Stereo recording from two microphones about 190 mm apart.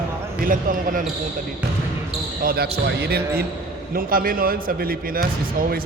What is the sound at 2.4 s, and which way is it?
Speech, 55° right (ahead or behind).